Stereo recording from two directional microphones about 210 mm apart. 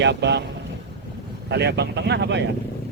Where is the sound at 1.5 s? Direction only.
55° right (ahead or behind).